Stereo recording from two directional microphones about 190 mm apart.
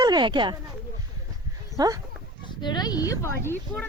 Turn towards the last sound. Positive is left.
turn(degrees=10)  # may be behind; listen again after turning